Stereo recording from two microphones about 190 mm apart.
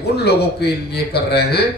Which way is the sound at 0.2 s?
60° left (ahead or behind).